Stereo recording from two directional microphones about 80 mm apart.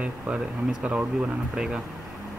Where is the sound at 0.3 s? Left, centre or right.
Centre.